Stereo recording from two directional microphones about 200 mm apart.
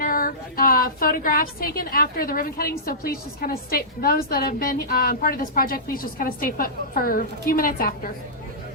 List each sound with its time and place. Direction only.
0.0 s a woman's voice: 45° left (ahead or behind)